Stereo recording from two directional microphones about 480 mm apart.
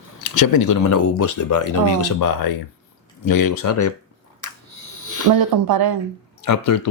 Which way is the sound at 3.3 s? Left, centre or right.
Left.